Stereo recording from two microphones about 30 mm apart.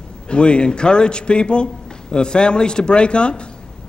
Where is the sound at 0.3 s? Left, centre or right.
Left.